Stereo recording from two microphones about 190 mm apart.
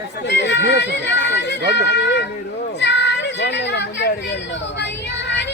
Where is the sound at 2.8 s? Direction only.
65° left (ahead or behind).